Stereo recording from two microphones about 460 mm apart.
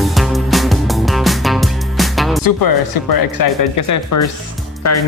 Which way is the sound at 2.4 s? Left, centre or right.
Left.